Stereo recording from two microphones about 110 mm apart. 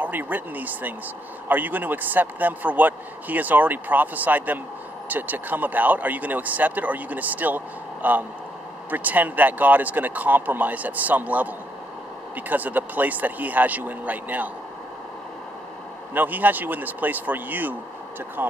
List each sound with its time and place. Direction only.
0.0 s speech: 15° right (ahead or behind)
16.1 s speech: 15° right (ahead or behind)